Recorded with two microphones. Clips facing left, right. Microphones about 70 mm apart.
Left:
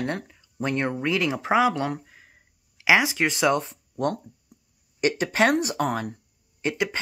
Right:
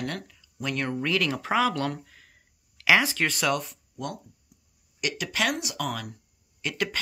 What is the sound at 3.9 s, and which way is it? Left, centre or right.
Speech, left.